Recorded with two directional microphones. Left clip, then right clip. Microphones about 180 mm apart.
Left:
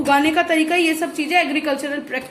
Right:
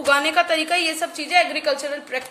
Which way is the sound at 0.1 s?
40° right (ahead or behind).